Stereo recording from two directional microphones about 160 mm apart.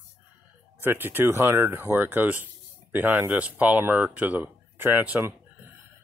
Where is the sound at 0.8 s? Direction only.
15° right (ahead or behind).